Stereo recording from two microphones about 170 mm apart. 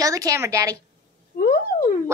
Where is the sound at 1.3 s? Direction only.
60° left (ahead or behind).